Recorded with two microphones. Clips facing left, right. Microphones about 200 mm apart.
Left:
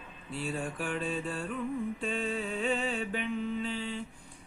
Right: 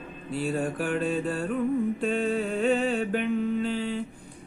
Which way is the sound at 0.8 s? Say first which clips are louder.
Right 7 dB; 40° right (ahead or behind).